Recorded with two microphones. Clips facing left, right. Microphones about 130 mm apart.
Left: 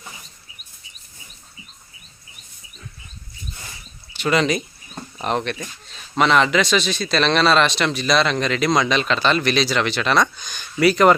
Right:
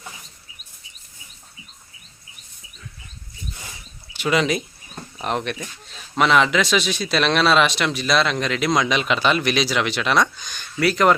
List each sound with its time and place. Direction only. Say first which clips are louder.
4.2 s speech: left 1 dB; 5° right (ahead or behind)
10.3 s speech: left 3 dB; centre (ahead or behind)